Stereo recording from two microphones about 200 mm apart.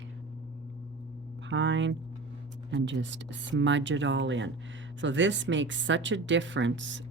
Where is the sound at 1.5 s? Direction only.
65° right (ahead or behind).